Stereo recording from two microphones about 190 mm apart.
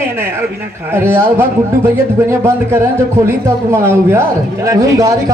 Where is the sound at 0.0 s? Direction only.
10° right (ahead or behind).